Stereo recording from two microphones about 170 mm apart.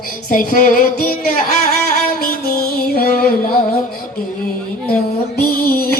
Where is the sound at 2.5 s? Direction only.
60° left (ahead or behind).